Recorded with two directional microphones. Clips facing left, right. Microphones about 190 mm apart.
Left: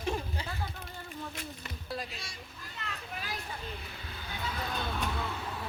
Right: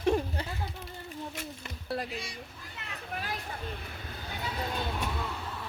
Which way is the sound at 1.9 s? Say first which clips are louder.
Right 5 dB; 60° right (ahead or behind).